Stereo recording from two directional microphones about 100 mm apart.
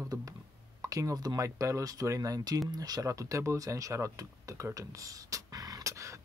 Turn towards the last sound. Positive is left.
turn(degrees=-30)  # may be behind; listen again after turning